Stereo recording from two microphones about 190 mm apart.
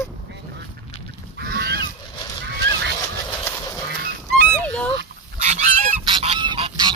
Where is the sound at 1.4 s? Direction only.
60° right (ahead or behind).